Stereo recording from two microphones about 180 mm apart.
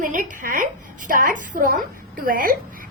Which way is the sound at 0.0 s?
50° right (ahead or behind).